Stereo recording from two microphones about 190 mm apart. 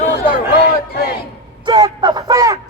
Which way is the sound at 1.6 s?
20° right (ahead or behind).